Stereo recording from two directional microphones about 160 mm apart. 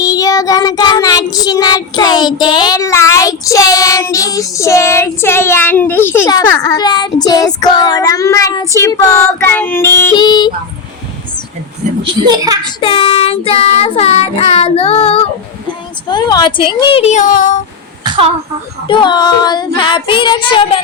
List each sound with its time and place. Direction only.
0.0 s child singing: 20° left (ahead or behind)
10.2 s child singing: 30° left (ahead or behind)
12.0 s a child's voice: 25° right (ahead or behind)
12.8 s child singing: 35° left (ahead or behind)
16.0 s child singing: 25° left (ahead or behind); by 17.6 s 55° left (ahead or behind)
18.0 s a sound: 30° right (ahead or behind)
18.9 s child singing: 30° left (ahead or behind)